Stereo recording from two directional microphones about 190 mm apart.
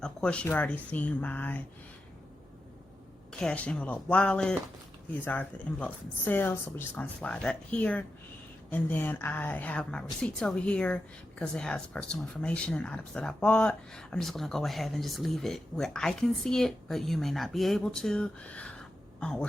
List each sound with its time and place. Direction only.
0.0 s speech: 5° left (ahead or behind)
3.3 s a woman's voice: 5° left (ahead or behind)